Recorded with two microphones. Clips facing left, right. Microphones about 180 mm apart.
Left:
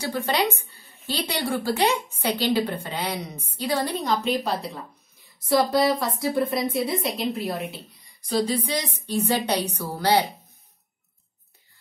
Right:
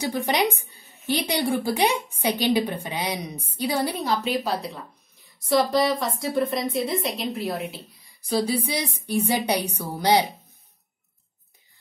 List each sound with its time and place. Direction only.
0.0 s a woman's voice: 15° right (ahead or behind)